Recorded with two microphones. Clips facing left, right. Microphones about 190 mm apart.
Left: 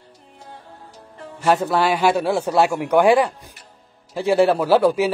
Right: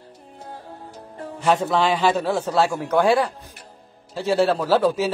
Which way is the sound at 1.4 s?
5° left (ahead or behind).